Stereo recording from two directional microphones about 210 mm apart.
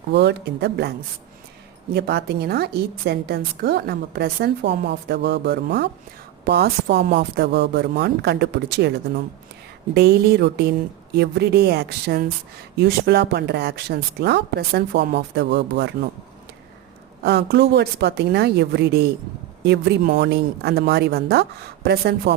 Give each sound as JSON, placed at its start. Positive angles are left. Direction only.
{"t": 0.1, "sound": "a woman's voice", "side_deg": -55}
{"t": 17.2, "sound": "a woman's voice", "side_deg": -50}